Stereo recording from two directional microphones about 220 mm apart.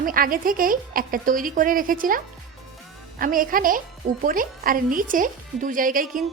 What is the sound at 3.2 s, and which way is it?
Speech, 40° right (ahead or behind).